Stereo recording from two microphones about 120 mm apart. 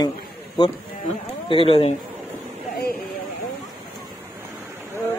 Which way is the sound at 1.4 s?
50° left (ahead or behind).